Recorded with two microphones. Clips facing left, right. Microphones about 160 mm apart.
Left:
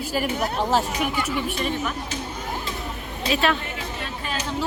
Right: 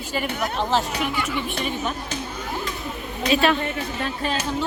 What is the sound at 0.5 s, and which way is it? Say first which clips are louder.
Speech: even; 10° left (ahead or behind).